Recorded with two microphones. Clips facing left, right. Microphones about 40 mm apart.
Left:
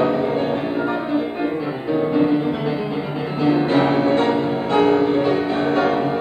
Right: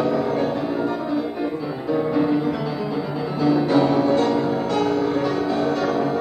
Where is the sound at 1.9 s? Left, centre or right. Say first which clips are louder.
Left 2 dB; left.